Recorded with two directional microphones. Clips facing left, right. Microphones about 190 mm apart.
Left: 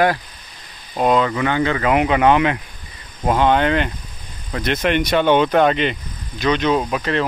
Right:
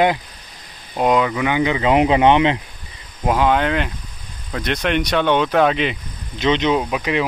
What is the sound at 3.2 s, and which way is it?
Speech, 5° right (ahead or behind).